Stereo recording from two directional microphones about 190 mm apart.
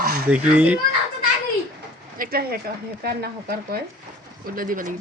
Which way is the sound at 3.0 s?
55° right (ahead or behind).